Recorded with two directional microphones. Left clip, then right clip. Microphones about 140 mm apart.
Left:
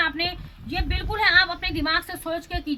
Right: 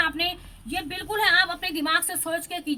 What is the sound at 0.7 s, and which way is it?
A woman's voice, 20° right (ahead or behind).